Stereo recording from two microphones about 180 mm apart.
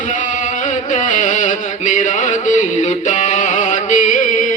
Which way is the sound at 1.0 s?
45° left (ahead or behind).